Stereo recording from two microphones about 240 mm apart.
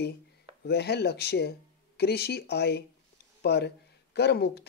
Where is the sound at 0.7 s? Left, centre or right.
Left.